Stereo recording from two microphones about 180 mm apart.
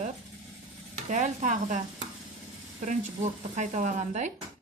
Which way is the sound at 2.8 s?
40° right (ahead or behind).